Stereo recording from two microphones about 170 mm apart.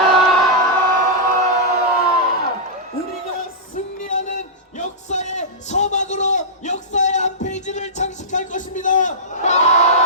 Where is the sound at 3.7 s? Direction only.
50° left (ahead or behind).